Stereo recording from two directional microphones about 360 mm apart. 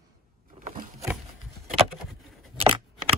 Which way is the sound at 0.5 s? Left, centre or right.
Right.